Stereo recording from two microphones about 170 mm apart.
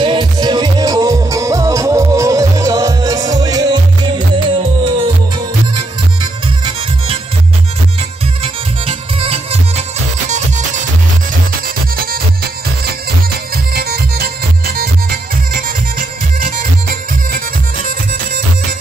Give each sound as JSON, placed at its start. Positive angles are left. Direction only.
{"t": 0.0, "sound": "music", "side_deg": -25}
{"t": 8.8, "sound": "music", "side_deg": -35}
{"t": 13.7, "sound": "music", "side_deg": -65}